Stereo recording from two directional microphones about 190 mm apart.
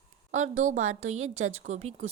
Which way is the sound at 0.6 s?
40° right (ahead or behind).